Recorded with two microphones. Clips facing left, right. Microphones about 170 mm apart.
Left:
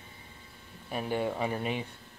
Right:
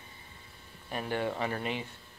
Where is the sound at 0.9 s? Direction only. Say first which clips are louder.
Left 2 dB; 15° left (ahead or behind).